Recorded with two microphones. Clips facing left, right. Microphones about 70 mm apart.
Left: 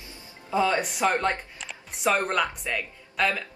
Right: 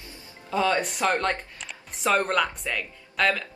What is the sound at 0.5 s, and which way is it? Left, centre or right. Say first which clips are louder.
Speech: even; centre.